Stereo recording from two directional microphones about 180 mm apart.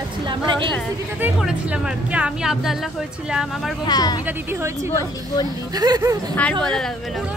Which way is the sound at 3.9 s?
20° left (ahead or behind).